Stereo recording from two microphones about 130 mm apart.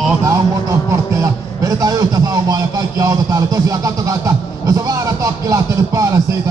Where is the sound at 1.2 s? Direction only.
25° right (ahead or behind).